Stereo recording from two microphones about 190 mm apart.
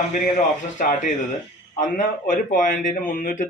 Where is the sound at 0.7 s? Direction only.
40° left (ahead or behind).